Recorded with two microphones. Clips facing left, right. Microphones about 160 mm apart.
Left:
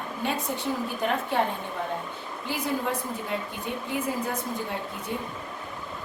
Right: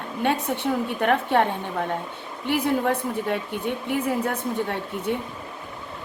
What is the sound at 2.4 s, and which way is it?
Speech, 65° right (ahead or behind).